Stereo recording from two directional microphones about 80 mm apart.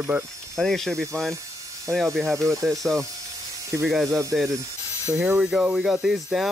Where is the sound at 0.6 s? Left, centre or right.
Centre.